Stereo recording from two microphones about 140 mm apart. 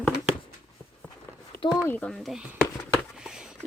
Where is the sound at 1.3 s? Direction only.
20° left (ahead or behind).